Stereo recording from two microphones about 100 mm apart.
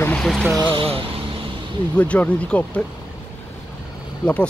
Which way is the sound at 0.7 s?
65° right (ahead or behind).